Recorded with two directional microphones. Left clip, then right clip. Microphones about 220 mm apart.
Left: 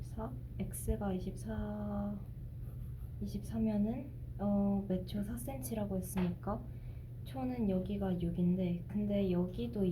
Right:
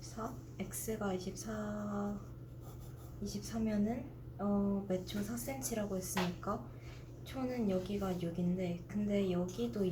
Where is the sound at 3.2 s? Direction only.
25° left (ahead or behind).